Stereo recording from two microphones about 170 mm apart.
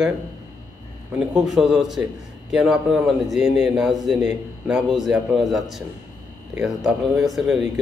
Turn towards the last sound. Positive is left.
turn(degrees=0)  # may be behind; listen again after turning